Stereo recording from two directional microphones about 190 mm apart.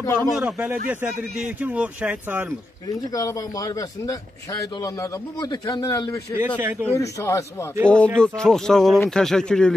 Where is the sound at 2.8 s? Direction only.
20° left (ahead or behind).